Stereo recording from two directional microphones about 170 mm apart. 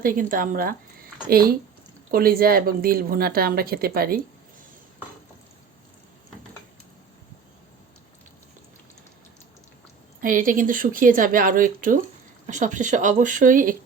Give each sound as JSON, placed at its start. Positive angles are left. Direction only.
{"t": 0.0, "sound": "a woman's voice", "side_deg": -55}
{"t": 10.2, "sound": "speech", "side_deg": -50}